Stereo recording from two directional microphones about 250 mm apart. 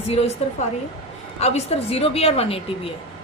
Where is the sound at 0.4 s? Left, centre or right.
Left.